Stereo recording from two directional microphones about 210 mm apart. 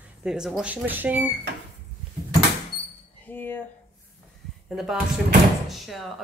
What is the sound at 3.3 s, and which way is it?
Speech, 10° left (ahead or behind).